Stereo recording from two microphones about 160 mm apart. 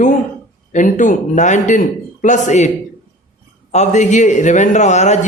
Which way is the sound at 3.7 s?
45° left (ahead or behind).